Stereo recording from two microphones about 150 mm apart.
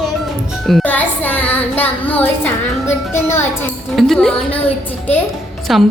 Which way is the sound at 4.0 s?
Centre (ahead or behind).